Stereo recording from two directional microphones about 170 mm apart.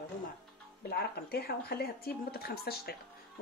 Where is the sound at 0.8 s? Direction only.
65° left (ahead or behind).